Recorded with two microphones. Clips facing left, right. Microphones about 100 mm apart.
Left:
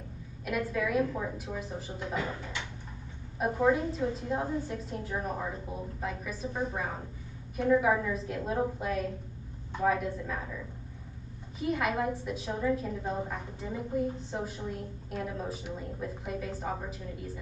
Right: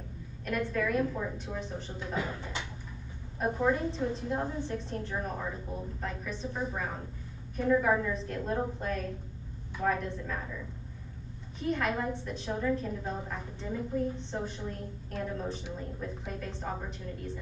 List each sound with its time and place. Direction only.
0.5 s a woman's voice: 5° left (ahead or behind)
3.3 s a woman's voice: 5° left (ahead or behind)
11.6 s a woman's voice: 5° left (ahead or behind)